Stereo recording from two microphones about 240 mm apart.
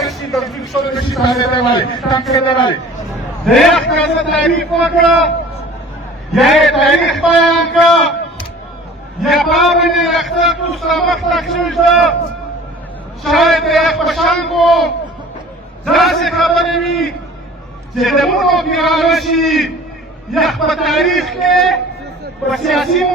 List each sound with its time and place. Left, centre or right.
0.0 s a sound: centre
0.7 s a man's voice: centre
1.4 s a man's voice: centre
3.4 s a man's voice: centre
6.3 s a man's voice: centre
9.2 s a man's voice: centre
13.2 s a man's voice: centre
15.9 s a man's voice: centre